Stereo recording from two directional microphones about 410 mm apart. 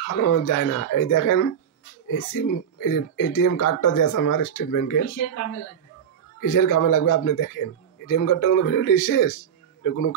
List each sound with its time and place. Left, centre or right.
0.1 s a man's voice: left
6.4 s a man's voice: left